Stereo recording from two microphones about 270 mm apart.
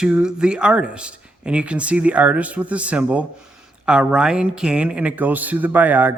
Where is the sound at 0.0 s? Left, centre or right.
Centre.